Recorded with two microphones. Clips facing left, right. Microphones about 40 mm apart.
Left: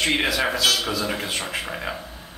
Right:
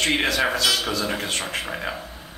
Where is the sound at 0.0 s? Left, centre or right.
Centre.